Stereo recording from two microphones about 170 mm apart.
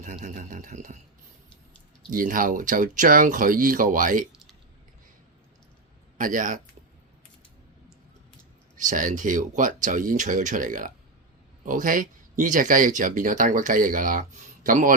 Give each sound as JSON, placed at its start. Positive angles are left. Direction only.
{"t": 0.0, "sound": "speech", "side_deg": -50}
{"t": 2.0, "sound": "speech", "side_deg": -55}
{"t": 6.1, "sound": "speech", "side_deg": -50}
{"t": 8.7, "sound": "speech", "side_deg": -50}